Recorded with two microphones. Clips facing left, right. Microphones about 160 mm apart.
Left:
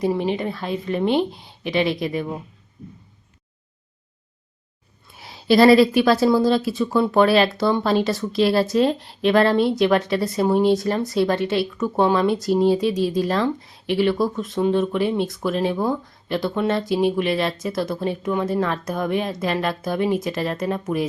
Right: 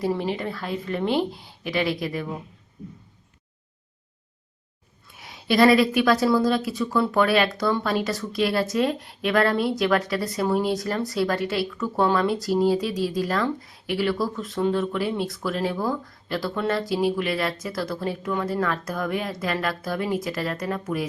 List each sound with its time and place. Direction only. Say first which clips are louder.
0.0 s speech: left 4 dB; 20° left (ahead or behind)
5.1 s speech: left 5 dB; 30° left (ahead or behind)